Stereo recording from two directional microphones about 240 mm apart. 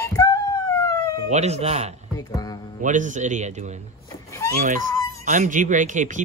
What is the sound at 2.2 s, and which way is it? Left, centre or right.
Music, centre.